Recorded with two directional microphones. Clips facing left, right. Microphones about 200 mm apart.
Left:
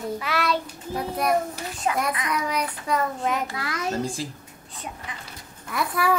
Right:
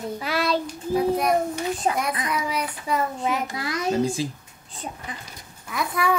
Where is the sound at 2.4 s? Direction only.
5° right (ahead or behind).